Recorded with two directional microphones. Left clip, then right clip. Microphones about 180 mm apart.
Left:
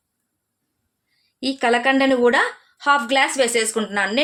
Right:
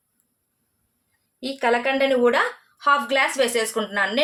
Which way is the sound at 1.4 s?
60° left (ahead or behind).